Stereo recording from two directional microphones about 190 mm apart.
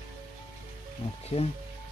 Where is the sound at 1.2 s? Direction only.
35° left (ahead or behind).